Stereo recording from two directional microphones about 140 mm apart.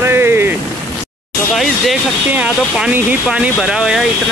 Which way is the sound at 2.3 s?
10° right (ahead or behind).